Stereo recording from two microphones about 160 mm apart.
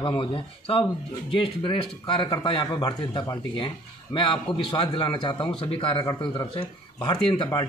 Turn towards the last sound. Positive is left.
turn(degrees=35)  # may be behind; listen again after turning